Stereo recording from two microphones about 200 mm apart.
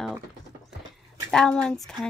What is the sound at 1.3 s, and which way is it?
Speech, 5° left (ahead or behind).